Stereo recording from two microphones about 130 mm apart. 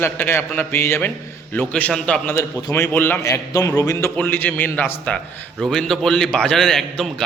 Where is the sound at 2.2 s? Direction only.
15° left (ahead or behind).